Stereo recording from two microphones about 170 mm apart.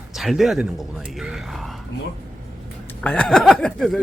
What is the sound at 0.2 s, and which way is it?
Speech, centre (ahead or behind).